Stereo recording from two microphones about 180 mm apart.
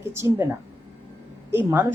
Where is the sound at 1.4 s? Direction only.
10° right (ahead or behind).